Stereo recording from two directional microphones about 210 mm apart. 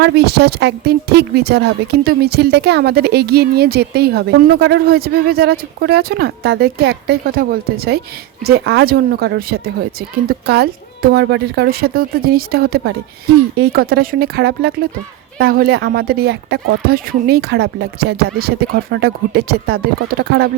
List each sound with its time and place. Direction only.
0.0 s speech: 50° right (ahead or behind)